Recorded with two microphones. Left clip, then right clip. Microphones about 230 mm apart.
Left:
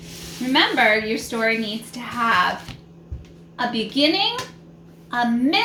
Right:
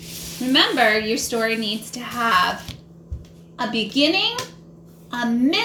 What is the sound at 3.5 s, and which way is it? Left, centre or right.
Speech, centre.